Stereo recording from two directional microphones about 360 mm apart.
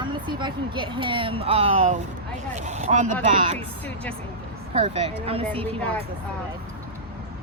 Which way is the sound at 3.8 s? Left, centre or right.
Centre.